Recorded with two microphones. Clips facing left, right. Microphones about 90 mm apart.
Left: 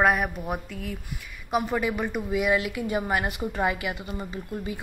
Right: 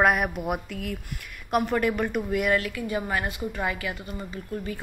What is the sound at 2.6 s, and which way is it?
A woman's voice, 20° left (ahead or behind).